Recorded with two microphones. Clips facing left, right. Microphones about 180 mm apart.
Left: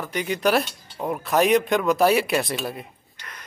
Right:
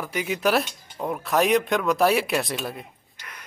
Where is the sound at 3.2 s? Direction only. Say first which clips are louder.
Left 1 dB; 10° right (ahead or behind).